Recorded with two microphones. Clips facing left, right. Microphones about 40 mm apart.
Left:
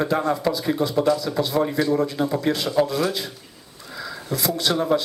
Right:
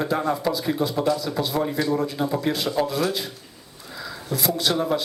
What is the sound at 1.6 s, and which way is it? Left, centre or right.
Speech, centre.